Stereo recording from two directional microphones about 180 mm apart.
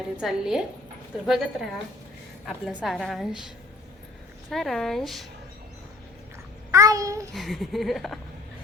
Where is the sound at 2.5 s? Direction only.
Centre (ahead or behind).